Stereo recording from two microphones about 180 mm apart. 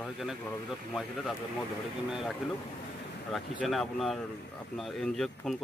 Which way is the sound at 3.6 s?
Centre (ahead or behind).